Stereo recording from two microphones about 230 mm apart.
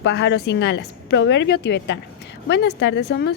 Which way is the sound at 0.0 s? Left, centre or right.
Left.